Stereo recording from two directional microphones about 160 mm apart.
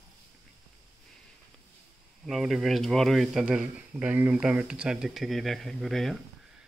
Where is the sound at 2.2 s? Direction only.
Centre (ahead or behind).